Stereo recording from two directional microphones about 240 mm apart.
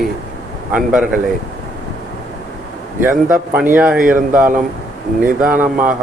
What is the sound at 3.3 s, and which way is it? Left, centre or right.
Speech, centre.